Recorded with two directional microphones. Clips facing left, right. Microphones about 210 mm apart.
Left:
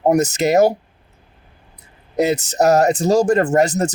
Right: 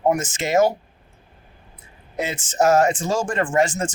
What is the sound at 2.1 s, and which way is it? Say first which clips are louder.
Speech: left 7 dB; 40° left (ahead or behind).